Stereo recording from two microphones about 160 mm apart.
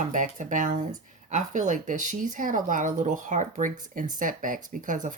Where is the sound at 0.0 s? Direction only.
55° right (ahead or behind).